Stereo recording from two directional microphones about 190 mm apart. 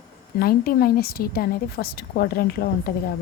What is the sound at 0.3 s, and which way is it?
Speech, 50° left (ahead or behind).